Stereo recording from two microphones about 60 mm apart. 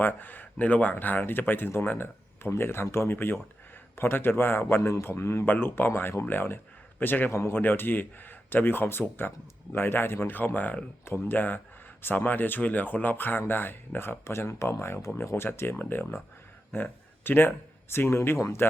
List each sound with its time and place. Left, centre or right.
0.0 s speech: left
7.3 s speech: left
7.6 s speech: left